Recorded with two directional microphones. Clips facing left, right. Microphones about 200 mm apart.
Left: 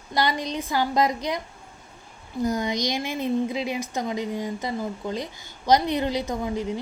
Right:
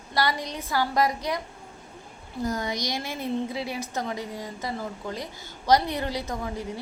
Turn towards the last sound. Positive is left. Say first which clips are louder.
# left 5 dB
turn(degrees=20)  # may be behind; listen again after turning